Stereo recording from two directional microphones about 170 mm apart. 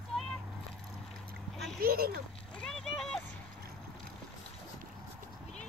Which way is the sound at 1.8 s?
60° right (ahead or behind).